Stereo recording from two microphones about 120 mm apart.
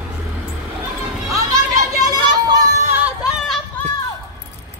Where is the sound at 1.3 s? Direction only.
30° right (ahead or behind).